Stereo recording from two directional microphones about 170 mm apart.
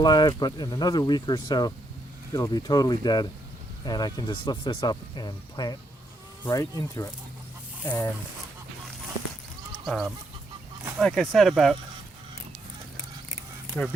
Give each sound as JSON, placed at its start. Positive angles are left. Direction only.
{"t": 0.0, "sound": "speech", "side_deg": 25}
{"t": 9.8, "sound": "speech", "side_deg": 0}